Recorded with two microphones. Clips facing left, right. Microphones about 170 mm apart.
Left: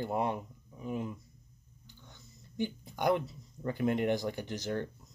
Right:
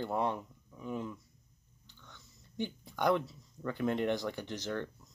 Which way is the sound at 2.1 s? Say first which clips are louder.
Left 2 dB; 10° left (ahead or behind).